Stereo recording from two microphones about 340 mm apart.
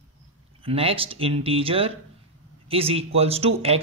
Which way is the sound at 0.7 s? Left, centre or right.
Centre.